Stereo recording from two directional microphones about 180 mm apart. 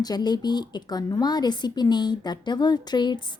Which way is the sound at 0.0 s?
20° left (ahead or behind).